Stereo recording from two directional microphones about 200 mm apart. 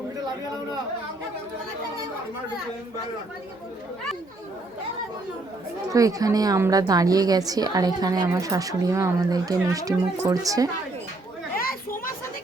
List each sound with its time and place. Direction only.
5.9 s a woman's voice: 15° right (ahead or behind)
11.5 s children playing: 45° left (ahead or behind)